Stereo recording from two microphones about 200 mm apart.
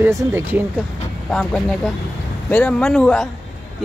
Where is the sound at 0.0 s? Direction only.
10° right (ahead or behind).